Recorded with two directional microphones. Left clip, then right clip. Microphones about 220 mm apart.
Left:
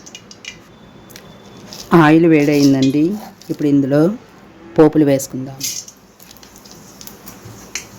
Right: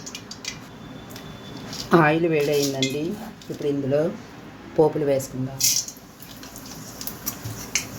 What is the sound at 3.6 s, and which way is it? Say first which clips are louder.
Speech: left 8 dB; 50° left (ahead or behind).